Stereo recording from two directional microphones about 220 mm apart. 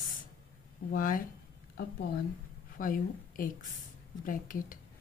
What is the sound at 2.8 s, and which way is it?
A woman's voice, 40° left (ahead or behind).